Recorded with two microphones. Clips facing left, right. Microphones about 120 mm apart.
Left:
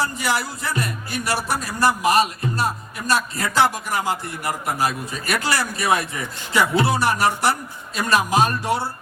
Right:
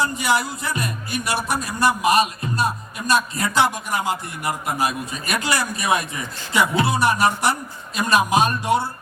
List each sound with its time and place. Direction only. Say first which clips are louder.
0.0 s a man's voice: right 2 dB; 20° right (ahead or behind)